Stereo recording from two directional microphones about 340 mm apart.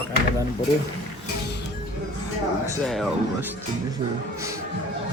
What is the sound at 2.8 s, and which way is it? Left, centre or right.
Speech, centre.